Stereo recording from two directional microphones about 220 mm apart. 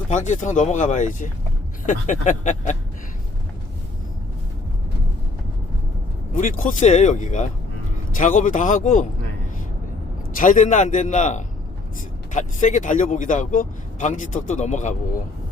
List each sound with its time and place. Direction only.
0.1 s speech: 35° left (ahead or behind)
6.3 s speech: 35° left (ahead or behind)
10.4 s speech: 35° left (ahead or behind)